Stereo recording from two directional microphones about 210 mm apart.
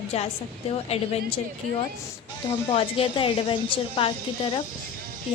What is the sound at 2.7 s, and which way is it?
Speech, 25° left (ahead or behind).